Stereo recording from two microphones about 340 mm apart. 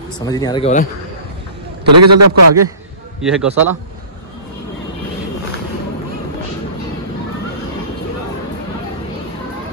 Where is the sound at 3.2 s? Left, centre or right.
Centre.